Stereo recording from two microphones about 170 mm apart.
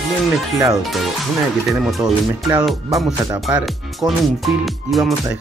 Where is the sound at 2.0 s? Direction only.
20° right (ahead or behind).